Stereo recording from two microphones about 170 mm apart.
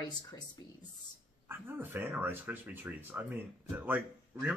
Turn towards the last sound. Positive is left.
turn(degrees=-10)  # may be behind; listen again after turning